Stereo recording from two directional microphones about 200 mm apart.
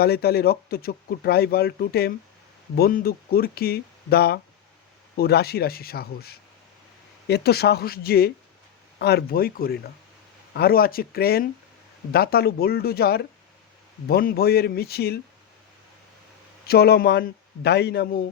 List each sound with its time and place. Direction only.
0.0 s speech: 50° left (ahead or behind)
16.6 s speech: 50° left (ahead or behind)